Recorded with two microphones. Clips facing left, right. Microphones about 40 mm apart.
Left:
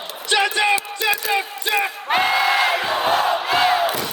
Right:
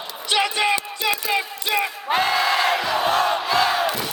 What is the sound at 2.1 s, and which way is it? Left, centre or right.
Crowd, left.